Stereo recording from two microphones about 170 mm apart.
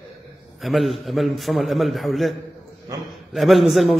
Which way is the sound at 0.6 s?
Centre (ahead or behind).